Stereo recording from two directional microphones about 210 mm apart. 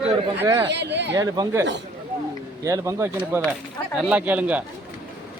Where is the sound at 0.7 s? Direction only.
55° right (ahead or behind).